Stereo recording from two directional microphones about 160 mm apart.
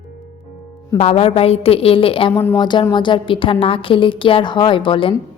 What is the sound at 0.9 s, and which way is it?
A woman's voice, 40° left (ahead or behind).